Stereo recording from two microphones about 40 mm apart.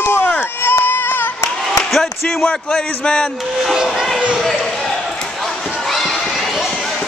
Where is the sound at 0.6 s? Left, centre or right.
Left.